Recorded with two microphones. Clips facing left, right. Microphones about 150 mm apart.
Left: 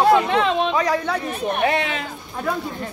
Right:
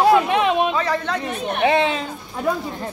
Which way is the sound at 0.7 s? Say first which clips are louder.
Left 1 dB; 10° left (ahead or behind).